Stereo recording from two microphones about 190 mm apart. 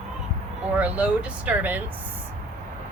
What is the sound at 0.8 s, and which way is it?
Speech, 5° right (ahead or behind).